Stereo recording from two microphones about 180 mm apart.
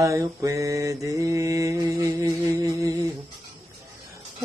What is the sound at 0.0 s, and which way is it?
Mantra, 20° right (ahead or behind).